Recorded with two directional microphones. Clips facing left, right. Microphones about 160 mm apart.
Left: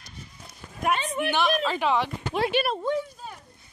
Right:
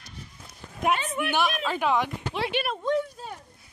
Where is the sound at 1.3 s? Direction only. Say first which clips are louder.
Left 2 dB; 5° right (ahead or behind).